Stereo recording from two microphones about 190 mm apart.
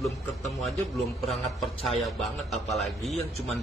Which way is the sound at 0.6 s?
Centre (ahead or behind).